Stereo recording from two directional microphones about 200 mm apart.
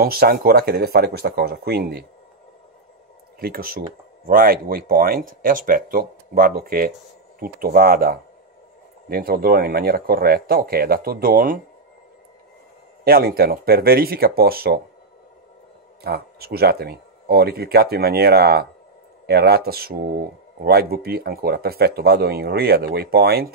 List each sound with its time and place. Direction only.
0.0 s speech: 50° right (ahead or behind)
3.3 s speech: 50° right (ahead or behind)
13.0 s speech: 50° right (ahead or behind)
16.0 s speech: 50° right (ahead or behind)